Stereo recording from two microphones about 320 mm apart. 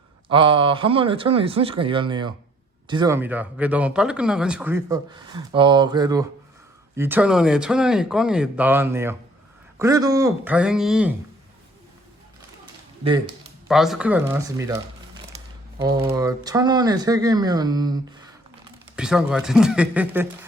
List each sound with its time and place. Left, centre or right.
0.3 s speech: centre
13.1 s speech: centre
13.7 s speech: centre
15.8 s speech: centre